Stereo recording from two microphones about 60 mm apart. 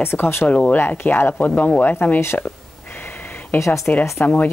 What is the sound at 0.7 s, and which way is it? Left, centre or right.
Speech, left.